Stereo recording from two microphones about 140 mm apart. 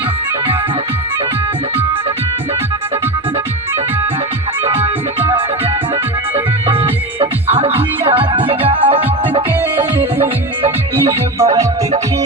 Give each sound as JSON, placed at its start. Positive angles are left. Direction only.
{"t": 4.6, "sound": "music", "side_deg": -45}
{"t": 6.3, "sound": "music", "side_deg": -40}
{"t": 11.3, "sound": "music", "side_deg": -20}